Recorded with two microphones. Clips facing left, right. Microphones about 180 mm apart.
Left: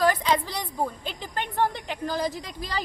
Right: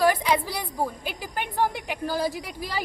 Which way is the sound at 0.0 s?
10° right (ahead or behind).